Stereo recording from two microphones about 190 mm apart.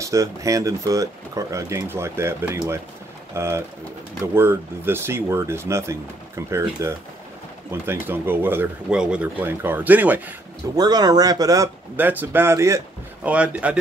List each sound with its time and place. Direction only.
0.0 s speech: 15° right (ahead or behind)
10.8 s speech: 20° right (ahead or behind)